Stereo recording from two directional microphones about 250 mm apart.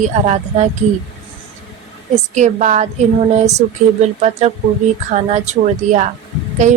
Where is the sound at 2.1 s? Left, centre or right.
Right.